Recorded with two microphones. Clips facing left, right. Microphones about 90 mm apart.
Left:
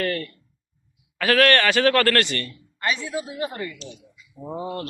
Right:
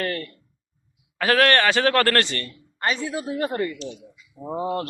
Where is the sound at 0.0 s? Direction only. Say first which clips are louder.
Left 2 dB; 20° right (ahead or behind).